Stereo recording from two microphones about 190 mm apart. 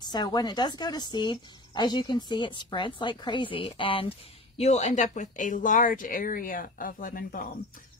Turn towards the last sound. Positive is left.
turn(degrees=50)  # may be behind; listen again after turning